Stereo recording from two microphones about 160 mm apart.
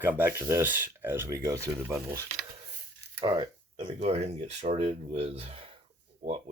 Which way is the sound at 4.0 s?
45° right (ahead or behind).